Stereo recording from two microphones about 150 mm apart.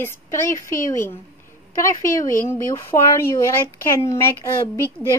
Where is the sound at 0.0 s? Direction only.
15° left (ahead or behind).